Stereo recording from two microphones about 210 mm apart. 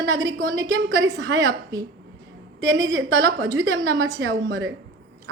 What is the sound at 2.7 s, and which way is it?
A woman's voice, 65° right (ahead or behind).